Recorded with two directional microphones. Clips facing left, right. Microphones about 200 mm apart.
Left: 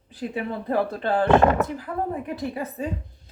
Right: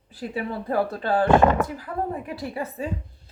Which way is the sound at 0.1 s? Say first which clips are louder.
Left 1 dB; 20° left (ahead or behind).